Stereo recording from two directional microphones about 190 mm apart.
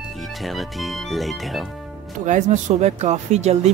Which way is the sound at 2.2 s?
40° right (ahead or behind).